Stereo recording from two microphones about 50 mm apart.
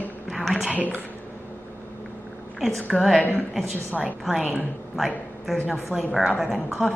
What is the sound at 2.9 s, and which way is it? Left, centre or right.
A man's voice, centre.